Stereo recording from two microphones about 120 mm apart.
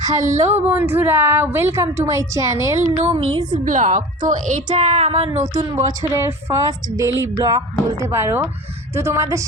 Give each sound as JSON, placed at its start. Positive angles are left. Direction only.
{"t": 0.0, "sound": "speech", "side_deg": -30}
{"t": 0.3, "sound": "a woman's voice", "side_deg": -20}
{"t": 3.0, "sound": "speech", "side_deg": -50}
{"t": 3.5, "sound": "a woman's voice", "side_deg": -90}
{"t": 5.7, "sound": "a woman's voice", "side_deg": -25}